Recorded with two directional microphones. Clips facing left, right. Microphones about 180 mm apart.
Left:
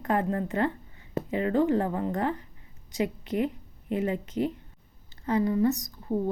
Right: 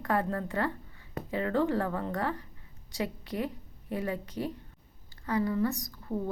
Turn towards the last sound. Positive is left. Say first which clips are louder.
# left 5 dB
turn(degrees=20)  # may be behind; listen again after turning